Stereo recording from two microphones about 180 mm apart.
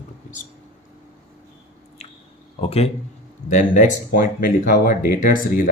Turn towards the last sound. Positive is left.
turn(degrees=50)  # may be behind; listen again after turning